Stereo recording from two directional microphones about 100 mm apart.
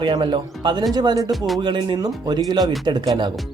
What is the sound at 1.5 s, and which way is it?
Speech, 50° right (ahead or behind).